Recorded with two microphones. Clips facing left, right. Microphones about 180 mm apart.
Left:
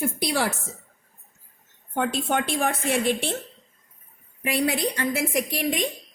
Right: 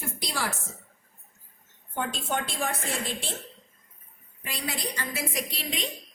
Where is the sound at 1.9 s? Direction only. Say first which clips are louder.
Left 6 dB; 60° left (ahead or behind).